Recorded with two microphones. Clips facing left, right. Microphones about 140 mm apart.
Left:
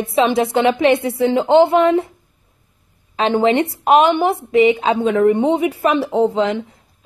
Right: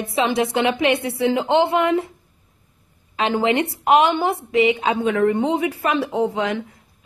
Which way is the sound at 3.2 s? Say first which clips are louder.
Left 4 dB; 25° left (ahead or behind).